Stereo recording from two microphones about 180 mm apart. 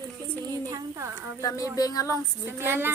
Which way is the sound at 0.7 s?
20° right (ahead or behind).